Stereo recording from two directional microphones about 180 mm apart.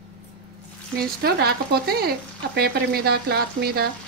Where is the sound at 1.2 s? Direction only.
60° right (ahead or behind).